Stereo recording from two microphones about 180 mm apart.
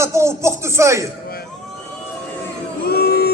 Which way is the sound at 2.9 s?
60° left (ahead or behind).